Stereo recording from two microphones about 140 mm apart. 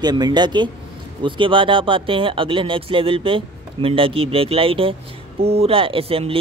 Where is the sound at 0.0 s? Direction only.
30° right (ahead or behind).